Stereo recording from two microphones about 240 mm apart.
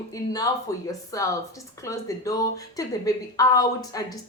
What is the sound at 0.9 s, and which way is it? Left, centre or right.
Speech, centre.